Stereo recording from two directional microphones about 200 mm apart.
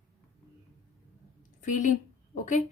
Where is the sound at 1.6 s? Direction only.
40° left (ahead or behind).